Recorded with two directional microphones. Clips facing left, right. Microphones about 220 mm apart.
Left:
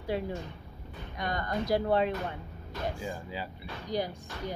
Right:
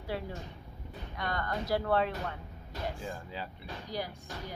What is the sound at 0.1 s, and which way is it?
A woman's voice, 20° left (ahead or behind).